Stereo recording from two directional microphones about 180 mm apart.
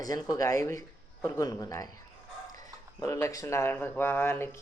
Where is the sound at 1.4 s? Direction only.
20° left (ahead or behind).